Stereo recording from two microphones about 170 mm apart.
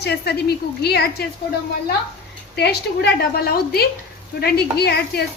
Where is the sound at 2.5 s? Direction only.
75° left (ahead or behind).